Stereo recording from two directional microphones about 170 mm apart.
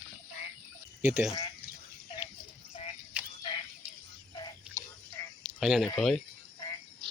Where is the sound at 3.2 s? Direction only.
10° right (ahead or behind).